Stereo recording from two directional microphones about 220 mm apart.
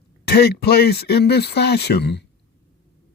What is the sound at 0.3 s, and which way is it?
Speech, 45° left (ahead or behind).